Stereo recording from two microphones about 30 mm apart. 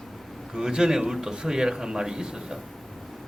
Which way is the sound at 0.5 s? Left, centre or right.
Right.